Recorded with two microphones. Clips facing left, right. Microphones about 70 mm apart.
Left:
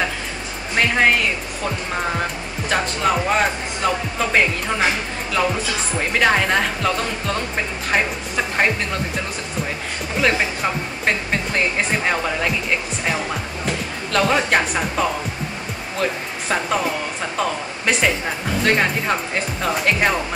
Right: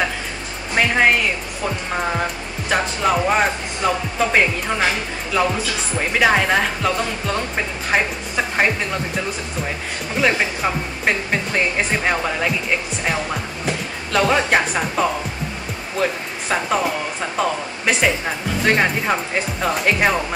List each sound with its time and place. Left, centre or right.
0.7 s music: centre
2.7 s speech: centre
5.9 s speech: centre
10.2 s speech: centre
14.1 s speech: centre